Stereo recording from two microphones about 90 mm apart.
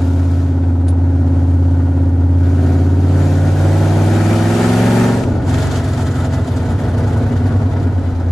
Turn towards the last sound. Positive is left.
turn(degrees=0)  # may be behind; listen again after turning